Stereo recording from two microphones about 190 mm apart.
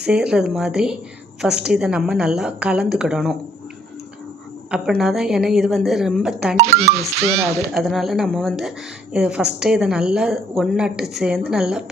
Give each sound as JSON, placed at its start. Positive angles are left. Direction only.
{"t": 0.0, "sound": "a woman's voice", "side_deg": -5}
{"t": 4.7, "sound": "a woman's voice", "side_deg": 0}
{"t": 6.6, "sound": "speech", "side_deg": -35}
{"t": 7.7, "sound": "a woman's voice", "side_deg": 0}